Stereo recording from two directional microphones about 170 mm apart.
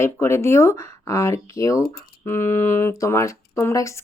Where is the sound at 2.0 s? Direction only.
65° left (ahead or behind).